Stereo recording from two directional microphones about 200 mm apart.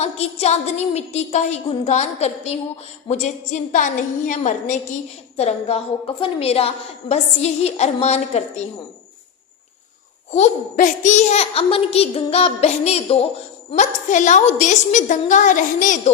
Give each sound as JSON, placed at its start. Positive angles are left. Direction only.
{"t": 0.0, "sound": "a woman's voice", "side_deg": 30}
{"t": 10.3, "sound": "a woman's voice", "side_deg": 35}